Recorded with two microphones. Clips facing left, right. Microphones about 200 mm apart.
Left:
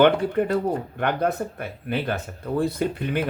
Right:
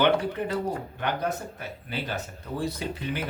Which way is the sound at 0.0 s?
55° left (ahead or behind).